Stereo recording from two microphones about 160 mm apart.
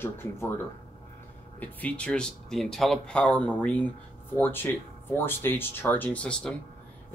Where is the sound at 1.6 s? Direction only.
10° left (ahead or behind).